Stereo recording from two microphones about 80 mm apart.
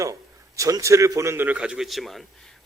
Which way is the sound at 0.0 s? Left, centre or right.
Right.